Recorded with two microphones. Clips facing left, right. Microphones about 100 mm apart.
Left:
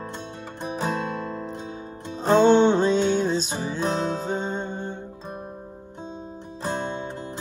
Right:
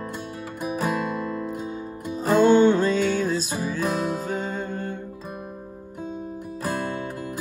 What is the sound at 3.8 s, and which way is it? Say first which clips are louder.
Music: left 2 dB; 5° right (ahead or behind).